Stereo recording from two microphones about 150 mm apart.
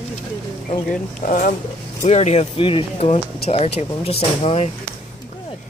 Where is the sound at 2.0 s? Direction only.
50° left (ahead or behind).